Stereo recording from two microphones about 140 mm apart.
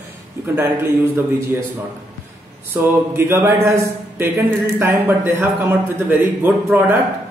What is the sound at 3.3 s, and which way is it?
Speech, 20° right (ahead or behind).